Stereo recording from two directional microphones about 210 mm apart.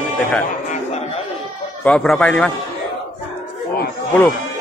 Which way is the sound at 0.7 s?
30° left (ahead or behind).